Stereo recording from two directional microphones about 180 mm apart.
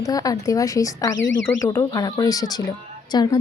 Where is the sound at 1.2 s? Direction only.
90° left.